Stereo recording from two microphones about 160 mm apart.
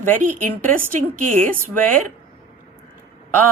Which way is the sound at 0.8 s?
55° right (ahead or behind).